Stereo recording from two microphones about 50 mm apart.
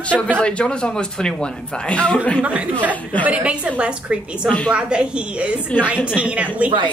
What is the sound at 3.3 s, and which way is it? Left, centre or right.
A woman's voice, right.